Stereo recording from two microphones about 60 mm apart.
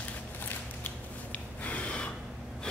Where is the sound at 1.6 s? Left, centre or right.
Left.